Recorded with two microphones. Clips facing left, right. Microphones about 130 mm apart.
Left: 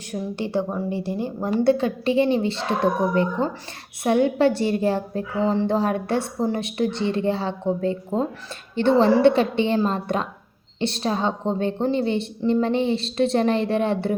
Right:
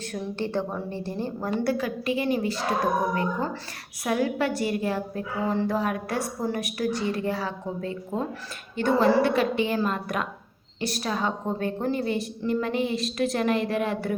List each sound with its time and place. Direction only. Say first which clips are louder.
0.1 s a woman's voice: left 4 dB; 15° left (ahead or behind); by 14.2 s 30° left (ahead or behind)